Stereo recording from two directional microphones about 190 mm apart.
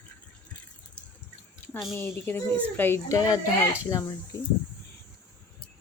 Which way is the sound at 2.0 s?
10° left (ahead or behind).